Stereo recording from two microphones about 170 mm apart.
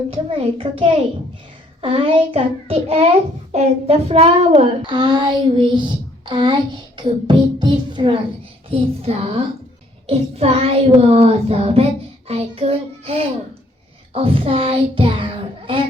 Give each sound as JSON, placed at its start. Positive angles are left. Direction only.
{"t": 0.1, "sound": "child singing", "side_deg": -35}